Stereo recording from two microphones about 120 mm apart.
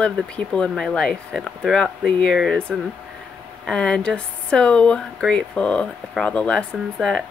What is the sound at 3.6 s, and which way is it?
Speech, 10° left (ahead or behind).